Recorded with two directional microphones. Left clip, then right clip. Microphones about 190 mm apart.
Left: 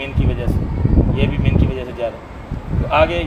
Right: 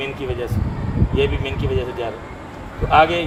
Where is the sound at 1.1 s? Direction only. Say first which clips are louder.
Right 1 dB; 20° left (ahead or behind).